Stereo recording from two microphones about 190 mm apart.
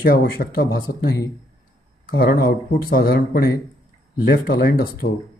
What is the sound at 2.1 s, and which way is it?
Speech, 55° left (ahead or behind).